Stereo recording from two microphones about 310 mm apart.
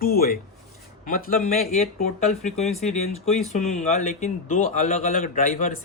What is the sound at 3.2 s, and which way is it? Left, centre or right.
Speech, left.